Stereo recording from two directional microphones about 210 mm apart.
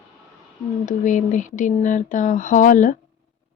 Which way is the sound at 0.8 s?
35° left (ahead or behind).